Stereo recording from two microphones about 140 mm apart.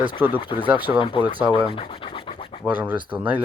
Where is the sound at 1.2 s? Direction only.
10° right (ahead or behind).